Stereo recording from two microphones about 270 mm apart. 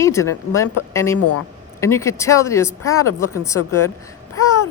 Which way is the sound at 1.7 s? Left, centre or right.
Centre.